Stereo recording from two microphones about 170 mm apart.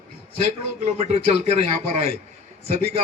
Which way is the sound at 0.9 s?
40° right (ahead or behind).